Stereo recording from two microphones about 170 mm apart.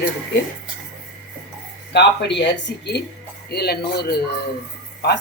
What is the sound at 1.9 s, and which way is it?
Speech, 85° left.